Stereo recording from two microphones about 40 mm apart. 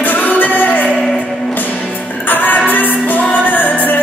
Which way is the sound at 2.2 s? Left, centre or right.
Left.